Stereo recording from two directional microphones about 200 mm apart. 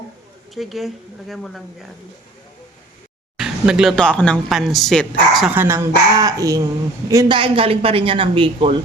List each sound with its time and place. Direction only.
0.5 s speech: centre (ahead or behind)
3.3 s speech: 5° right (ahead or behind)
5.5 s speech: 15° right (ahead or behind)